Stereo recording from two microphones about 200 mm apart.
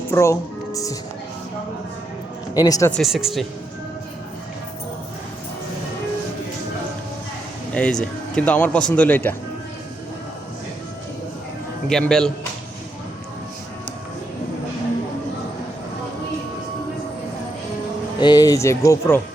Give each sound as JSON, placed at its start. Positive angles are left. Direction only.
{"t": 0.1, "sound": "speech", "side_deg": 15}
{"t": 2.6, "sound": "speech", "side_deg": 20}
{"t": 2.9, "sound": "speech", "side_deg": 0}
{"t": 7.7, "sound": "speech", "side_deg": 5}
{"t": 11.9, "sound": "speech", "side_deg": 5}
{"t": 18.2, "sound": "speech", "side_deg": 20}